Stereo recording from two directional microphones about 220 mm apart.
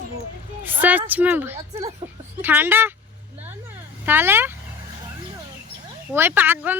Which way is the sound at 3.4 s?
10° right (ahead or behind).